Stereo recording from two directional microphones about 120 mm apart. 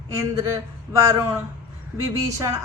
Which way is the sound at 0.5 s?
25° right (ahead or behind).